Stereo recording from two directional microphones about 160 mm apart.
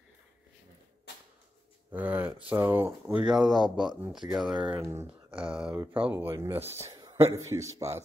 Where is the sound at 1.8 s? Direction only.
10° right (ahead or behind).